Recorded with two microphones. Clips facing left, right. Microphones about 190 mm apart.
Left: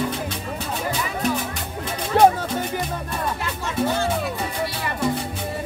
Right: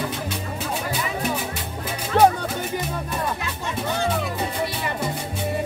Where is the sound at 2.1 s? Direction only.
5° left (ahead or behind).